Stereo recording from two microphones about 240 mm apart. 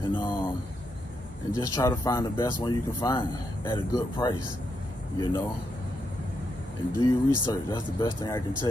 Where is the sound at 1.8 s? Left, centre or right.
Centre.